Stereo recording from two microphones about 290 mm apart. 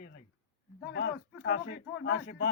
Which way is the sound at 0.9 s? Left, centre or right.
Left.